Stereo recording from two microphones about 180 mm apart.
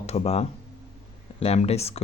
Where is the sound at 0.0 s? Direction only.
35° left (ahead or behind).